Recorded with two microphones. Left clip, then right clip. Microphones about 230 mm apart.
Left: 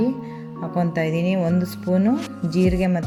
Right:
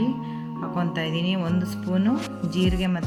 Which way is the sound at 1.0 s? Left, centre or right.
Right.